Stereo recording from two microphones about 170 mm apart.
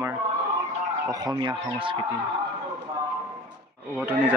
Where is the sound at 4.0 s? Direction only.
10° right (ahead or behind).